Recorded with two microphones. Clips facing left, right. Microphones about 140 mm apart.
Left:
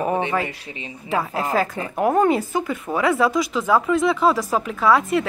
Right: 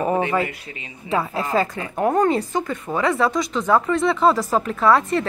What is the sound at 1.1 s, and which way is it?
Speech, centre (ahead or behind).